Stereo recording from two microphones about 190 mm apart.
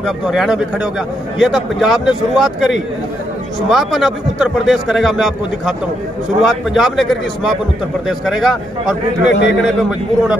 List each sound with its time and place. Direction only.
0.0 s a man's voice: centre (ahead or behind)
9.3 s a man's voice: 70° left (ahead or behind)
9.7 s a man's voice: 5° right (ahead or behind)